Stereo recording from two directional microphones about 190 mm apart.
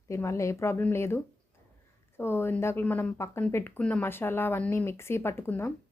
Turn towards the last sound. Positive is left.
turn(degrees=10)  # may be behind; listen again after turning